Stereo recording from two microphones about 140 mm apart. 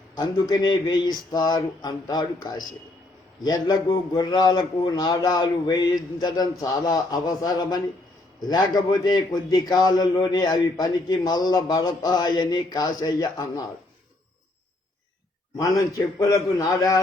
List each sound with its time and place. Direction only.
0.2 s a man's voice: 30° left (ahead or behind)
16.0 s a man's voice: 20° left (ahead or behind)